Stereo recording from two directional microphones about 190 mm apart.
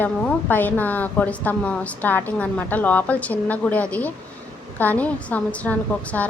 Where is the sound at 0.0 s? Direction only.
10° left (ahead or behind).